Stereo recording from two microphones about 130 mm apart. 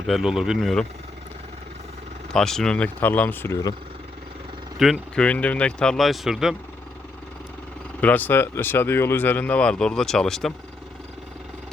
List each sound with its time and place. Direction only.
0.1 s speech: 5° right (ahead or behind)
2.3 s speech: 5° left (ahead or behind)
4.8 s speech: centre (ahead or behind)
5.2 s speech: 10° left (ahead or behind)
8.0 s speech: 15° left (ahead or behind)